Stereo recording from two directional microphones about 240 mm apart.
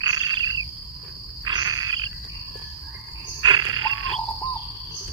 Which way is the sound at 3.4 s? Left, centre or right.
Centre.